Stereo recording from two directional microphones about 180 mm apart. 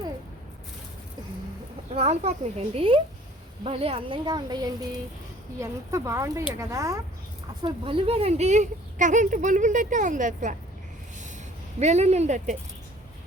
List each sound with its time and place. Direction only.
1.9 s speech: 35° right (ahead or behind); by 7.0 s 15° right (ahead or behind)
7.6 s speech: 30° right (ahead or behind); by 10.6 s 45° right (ahead or behind)
11.8 s speech: 35° right (ahead or behind)